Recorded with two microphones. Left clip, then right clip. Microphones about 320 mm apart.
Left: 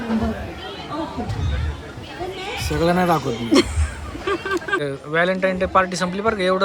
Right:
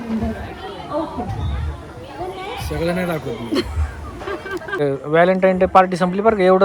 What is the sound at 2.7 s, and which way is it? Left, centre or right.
Speech, centre.